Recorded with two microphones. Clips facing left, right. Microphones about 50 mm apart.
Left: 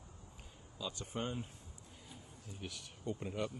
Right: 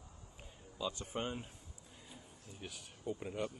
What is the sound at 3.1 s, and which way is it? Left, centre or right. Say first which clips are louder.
Speech: left 1 dB; centre.